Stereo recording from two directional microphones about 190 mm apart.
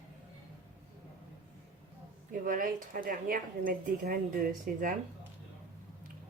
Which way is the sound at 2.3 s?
45° right (ahead or behind).